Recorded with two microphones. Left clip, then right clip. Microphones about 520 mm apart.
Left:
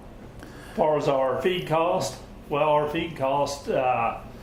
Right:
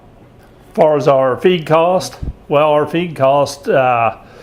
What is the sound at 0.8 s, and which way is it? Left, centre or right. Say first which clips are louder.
Speech: right 11 dB; right.